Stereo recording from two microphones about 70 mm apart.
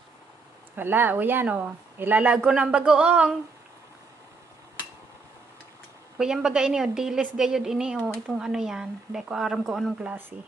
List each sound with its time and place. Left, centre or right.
0.7 s speech: right
6.1 s a woman's voice: centre